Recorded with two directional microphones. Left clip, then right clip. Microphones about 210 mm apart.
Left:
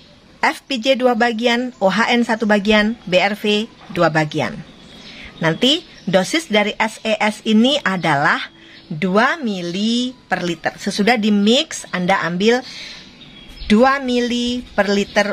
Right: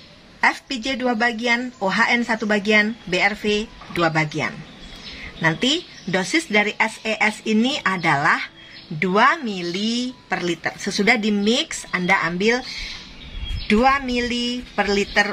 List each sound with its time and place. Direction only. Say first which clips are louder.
0.4 s speech: left 1 dB; 50° left (ahead or behind)
13.7 s speech: left 3 dB; 50° left (ahead or behind)